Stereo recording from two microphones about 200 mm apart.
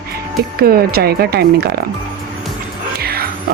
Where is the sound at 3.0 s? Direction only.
50° right (ahead or behind).